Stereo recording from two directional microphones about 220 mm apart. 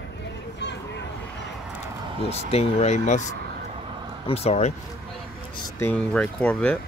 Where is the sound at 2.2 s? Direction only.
25° left (ahead or behind).